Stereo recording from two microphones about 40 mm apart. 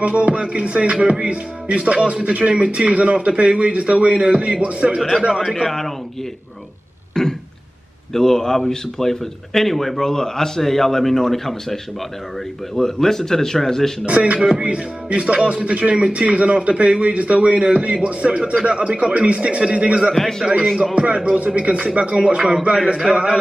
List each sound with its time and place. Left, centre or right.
0.0 s speech: right
5.3 s a man's voice: centre
7.2 s throat clearing: centre
8.1 s speech: centre
14.0 s speech: right
20.2 s speech: centre
20.9 s speech: right